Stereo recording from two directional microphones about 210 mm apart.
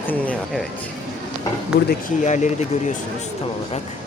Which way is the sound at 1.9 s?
35° left (ahead or behind).